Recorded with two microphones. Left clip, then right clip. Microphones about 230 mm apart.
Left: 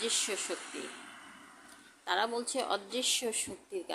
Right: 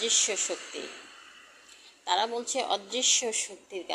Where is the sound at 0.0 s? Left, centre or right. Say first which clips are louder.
Right 6 dB; centre.